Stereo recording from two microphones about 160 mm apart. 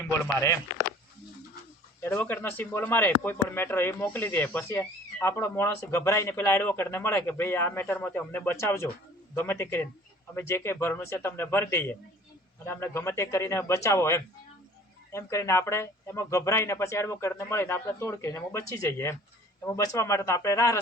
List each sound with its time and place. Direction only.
2.0 s speech: 10° left (ahead or behind)